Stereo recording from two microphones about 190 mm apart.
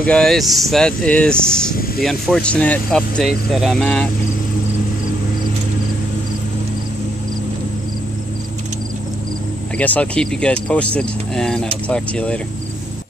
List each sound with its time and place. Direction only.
0.0 s speech: 5° left (ahead or behind)
9.8 s speech: 5° left (ahead or behind)